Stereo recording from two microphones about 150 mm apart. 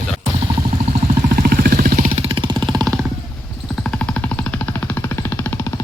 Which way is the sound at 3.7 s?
5° left (ahead or behind).